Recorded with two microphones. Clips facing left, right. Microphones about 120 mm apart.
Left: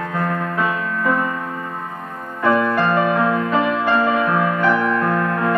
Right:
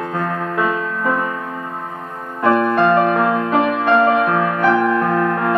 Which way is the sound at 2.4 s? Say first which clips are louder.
Right 3 dB; 30° right (ahead or behind).